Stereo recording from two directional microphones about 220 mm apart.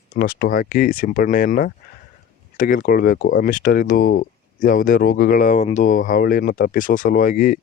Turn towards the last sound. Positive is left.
turn(degrees=35)  # may be behind; listen again after turning